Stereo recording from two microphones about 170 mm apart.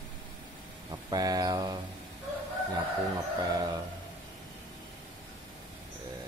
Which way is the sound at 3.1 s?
20° right (ahead or behind).